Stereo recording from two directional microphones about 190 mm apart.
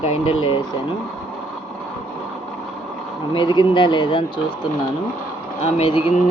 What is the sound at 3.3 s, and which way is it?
Speech, 25° left (ahead or behind).